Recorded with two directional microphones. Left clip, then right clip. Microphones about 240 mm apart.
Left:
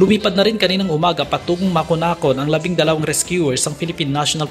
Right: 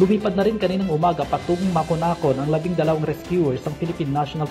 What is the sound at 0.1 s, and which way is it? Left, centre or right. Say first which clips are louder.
Speech: left 5 dB; left.